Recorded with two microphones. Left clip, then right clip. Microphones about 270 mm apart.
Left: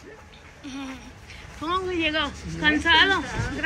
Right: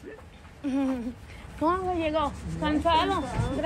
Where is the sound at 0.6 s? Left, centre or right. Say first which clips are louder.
Right 8 dB; right.